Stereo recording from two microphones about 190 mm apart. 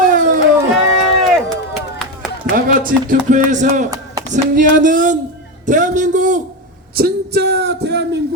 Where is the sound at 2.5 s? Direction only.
45° right (ahead or behind).